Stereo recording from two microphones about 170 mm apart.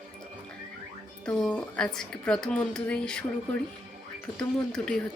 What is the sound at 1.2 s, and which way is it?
Speech, 5° left (ahead or behind).